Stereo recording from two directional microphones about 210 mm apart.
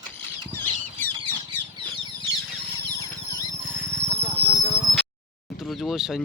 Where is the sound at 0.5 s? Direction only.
10° left (ahead or behind).